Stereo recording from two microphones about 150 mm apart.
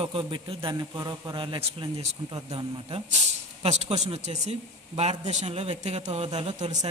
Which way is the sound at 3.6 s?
45° right (ahead or behind).